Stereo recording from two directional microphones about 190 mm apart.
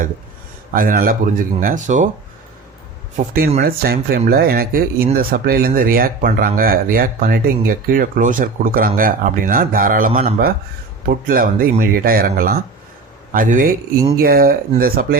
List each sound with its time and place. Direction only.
0.7 s speech: 50° right (ahead or behind)
3.2 s speech: 50° right (ahead or behind)
14.2 s speech: 50° right (ahead or behind)